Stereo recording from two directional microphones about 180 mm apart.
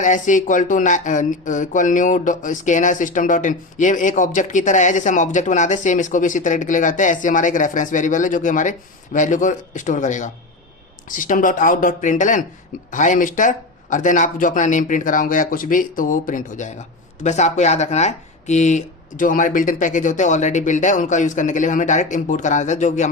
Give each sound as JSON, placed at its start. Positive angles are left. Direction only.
{"t": 0.0, "sound": "speech", "side_deg": 45}